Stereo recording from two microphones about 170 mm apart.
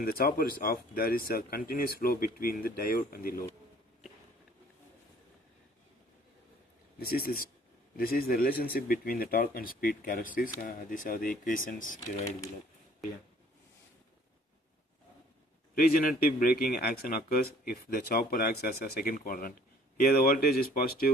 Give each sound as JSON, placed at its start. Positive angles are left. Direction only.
{"t": 0.0, "sound": "speech", "side_deg": 60}
{"t": 7.0, "sound": "speech", "side_deg": 60}
{"t": 15.7, "sound": "speech", "side_deg": 60}